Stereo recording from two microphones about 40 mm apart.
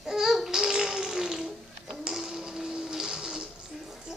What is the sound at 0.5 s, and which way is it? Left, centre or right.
Music, centre.